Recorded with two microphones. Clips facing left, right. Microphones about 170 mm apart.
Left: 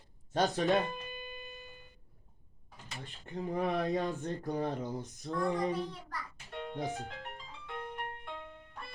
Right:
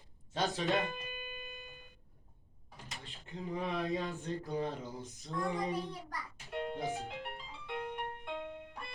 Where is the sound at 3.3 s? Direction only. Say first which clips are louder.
Left 4 dB; 50° left (ahead or behind).